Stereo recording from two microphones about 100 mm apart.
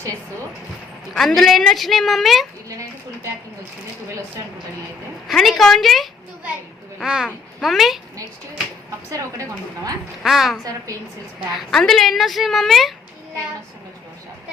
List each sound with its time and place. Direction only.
1.1 s a woman's voice: 5° left (ahead or behind)
5.3 s a woman's voice: centre (ahead or behind)
9.1 s a woman's voice: 35° right (ahead or behind)
10.2 s a woman's voice: centre (ahead or behind)
11.7 s a woman's voice: 5° left (ahead or behind)